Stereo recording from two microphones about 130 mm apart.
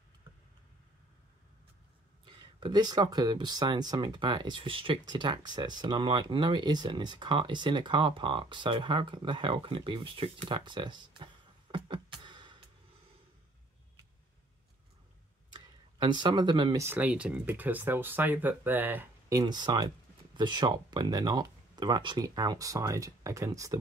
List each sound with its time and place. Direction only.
2.2 s speech: 40° right (ahead or behind)
11.7 s music: 40° right (ahead or behind)
15.5 s a sound: 35° right (ahead or behind)
16.8 s speech: 15° right (ahead or behind)
19.3 s speech: 35° right (ahead or behind)